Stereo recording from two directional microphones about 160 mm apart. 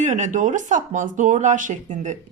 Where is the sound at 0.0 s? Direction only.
50° right (ahead or behind).